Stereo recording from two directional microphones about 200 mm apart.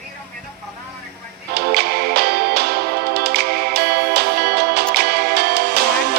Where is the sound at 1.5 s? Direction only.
50° right (ahead or behind).